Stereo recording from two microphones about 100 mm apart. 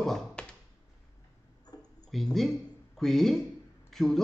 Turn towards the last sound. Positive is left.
turn(degrees=5)  # may be behind; listen again after turning